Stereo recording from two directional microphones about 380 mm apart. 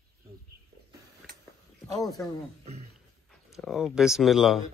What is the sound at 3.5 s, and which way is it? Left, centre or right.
Speech, centre.